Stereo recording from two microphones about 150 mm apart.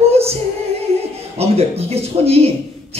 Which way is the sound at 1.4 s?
40° right (ahead or behind).